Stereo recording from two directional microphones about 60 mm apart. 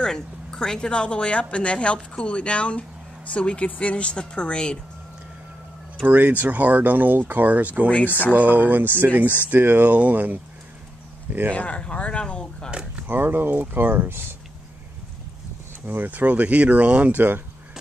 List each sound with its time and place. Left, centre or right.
0.0 s speech: centre
6.0 s speech: right
11.5 s speech: left
13.0 s speech: right
15.9 s speech: right